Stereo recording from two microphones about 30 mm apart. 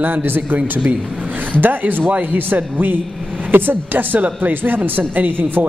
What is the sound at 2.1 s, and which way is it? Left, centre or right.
Speech, right.